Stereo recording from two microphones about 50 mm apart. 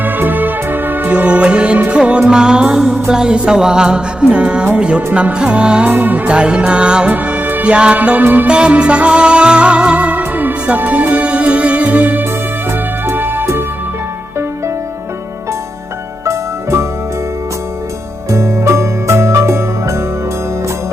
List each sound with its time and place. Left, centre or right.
0.0 s music: right
1.1 s music: right
5.9 s music: right
6.2 s music: right
7.1 s music: right
7.6 s music: right
8.0 s music: right
8.4 s music: right
13.1 s music: right
13.4 s music: right
16.2 s music: right
18.3 s music: right